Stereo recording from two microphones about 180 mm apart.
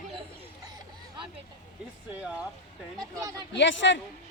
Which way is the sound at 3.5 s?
90° left.